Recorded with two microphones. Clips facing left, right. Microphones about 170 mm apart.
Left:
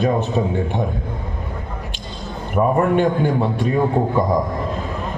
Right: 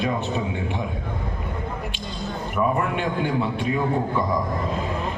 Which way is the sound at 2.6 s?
40° left (ahead or behind).